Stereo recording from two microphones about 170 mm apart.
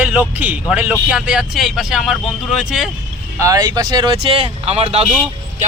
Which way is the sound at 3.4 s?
20° right (ahead or behind).